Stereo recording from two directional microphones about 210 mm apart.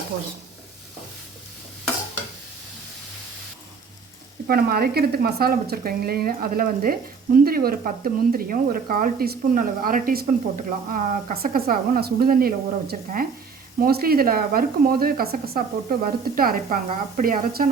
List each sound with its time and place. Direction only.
4.4 s speech: 45° right (ahead or behind)